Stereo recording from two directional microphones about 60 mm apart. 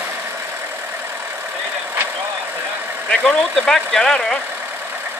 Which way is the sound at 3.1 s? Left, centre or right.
Centre.